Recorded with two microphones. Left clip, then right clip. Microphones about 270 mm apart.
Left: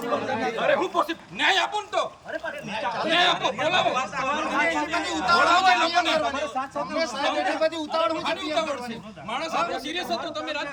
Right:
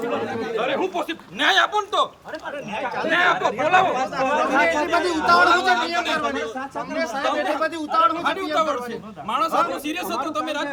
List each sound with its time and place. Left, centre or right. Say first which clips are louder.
0.5 s speech: even; centre